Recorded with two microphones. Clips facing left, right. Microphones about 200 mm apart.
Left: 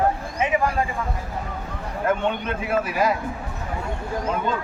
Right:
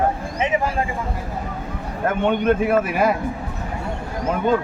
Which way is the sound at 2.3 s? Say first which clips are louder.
Right 7 dB; 55° right (ahead or behind).